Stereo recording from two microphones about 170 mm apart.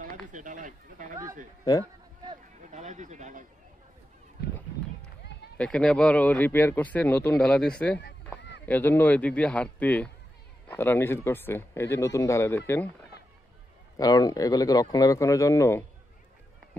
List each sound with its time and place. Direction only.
0.3 s speech: 50° right (ahead or behind)
1.6 s speech: 20° left (ahead or behind)
2.7 s speech: 45° right (ahead or behind)
5.6 s speech: 5° left (ahead or behind)
8.4 s a sound: 90° left
8.6 s speech: 10° left (ahead or behind)
13.9 s speech: 20° left (ahead or behind)